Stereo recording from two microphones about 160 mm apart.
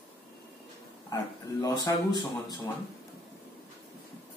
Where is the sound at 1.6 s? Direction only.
25° left (ahead or behind).